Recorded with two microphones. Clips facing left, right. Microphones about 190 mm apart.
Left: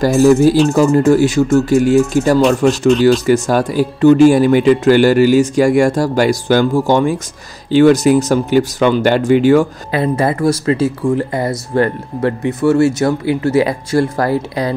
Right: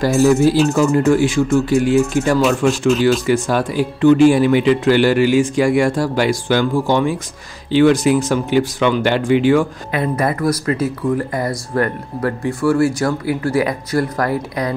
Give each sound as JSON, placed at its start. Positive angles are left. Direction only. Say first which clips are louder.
{"t": 0.0, "sound": "speech", "louder": "left 3 dB", "side_deg": 40}
{"t": 10.1, "sound": "speech", "louder": "left 3 dB", "side_deg": 25}